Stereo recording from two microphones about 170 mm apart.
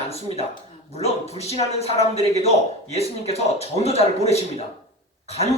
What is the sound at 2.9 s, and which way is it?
Speech, 35° left (ahead or behind).